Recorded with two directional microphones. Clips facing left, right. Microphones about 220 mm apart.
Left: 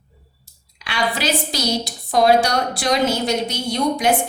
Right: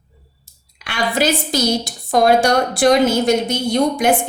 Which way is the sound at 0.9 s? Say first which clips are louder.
Right 4 dB; 50° right (ahead or behind).